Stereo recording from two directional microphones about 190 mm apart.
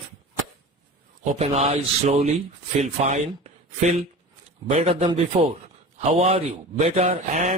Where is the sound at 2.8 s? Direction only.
35° right (ahead or behind).